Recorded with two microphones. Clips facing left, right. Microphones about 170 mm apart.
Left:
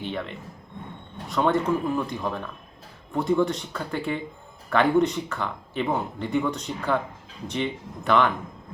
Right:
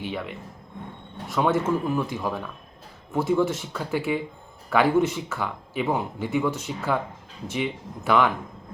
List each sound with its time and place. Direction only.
0.0 s speech: 5° right (ahead or behind)